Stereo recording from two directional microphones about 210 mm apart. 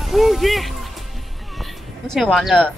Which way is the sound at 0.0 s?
Centre (ahead or behind).